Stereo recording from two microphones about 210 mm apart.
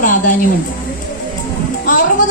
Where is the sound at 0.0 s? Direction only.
40° left (ahead or behind).